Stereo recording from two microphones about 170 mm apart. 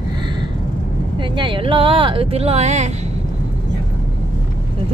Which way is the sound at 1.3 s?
30° right (ahead or behind).